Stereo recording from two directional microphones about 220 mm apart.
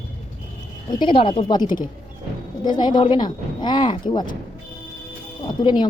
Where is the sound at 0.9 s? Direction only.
20° left (ahead or behind).